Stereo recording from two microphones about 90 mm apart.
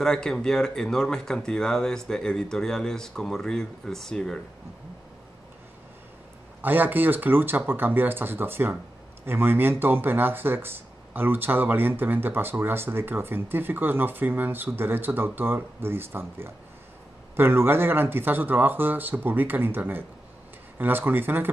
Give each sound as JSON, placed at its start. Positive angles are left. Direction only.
{"t": 0.0, "sound": "speech", "side_deg": 5}
{"t": 6.6, "sound": "speech", "side_deg": -20}